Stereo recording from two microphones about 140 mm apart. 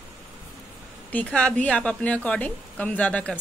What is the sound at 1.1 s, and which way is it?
A woman's voice, 10° left (ahead or behind).